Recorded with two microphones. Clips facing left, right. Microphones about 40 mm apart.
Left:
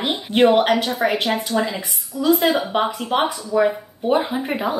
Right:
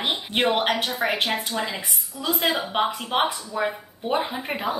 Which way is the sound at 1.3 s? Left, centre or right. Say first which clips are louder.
Left 6 dB; left.